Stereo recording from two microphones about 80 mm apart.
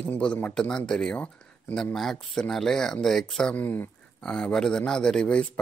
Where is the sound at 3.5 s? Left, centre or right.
Left.